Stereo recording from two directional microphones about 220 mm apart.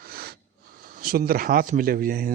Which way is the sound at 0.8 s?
40° right (ahead or behind).